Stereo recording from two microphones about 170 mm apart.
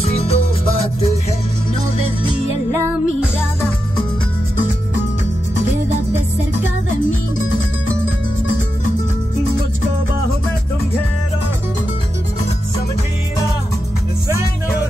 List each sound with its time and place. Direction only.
0.0 s music: 35° left (ahead or behind)